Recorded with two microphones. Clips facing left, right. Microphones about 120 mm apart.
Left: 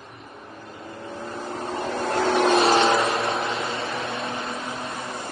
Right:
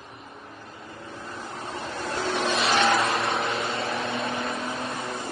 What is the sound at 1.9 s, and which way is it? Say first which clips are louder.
Vehicle: left 7 dB; 60° left (ahead or behind).